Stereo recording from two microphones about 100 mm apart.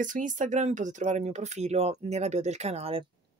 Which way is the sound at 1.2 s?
90° right.